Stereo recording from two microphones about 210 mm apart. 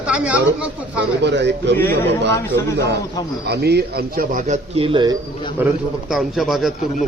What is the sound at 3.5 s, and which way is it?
A man's voice, 50° right (ahead or behind).